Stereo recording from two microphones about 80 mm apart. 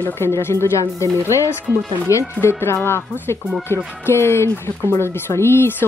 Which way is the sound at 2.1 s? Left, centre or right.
Left.